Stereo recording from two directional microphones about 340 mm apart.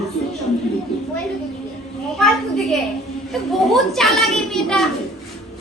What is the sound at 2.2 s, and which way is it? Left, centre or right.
A woman's voice, centre.